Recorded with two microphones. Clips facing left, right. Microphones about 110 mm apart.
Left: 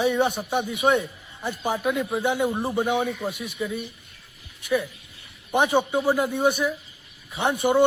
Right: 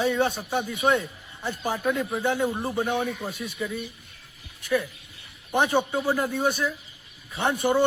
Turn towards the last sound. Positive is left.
turn(degrees=15)  # may be behind; listen again after turning